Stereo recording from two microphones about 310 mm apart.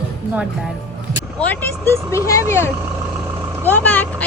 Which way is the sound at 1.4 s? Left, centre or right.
Centre.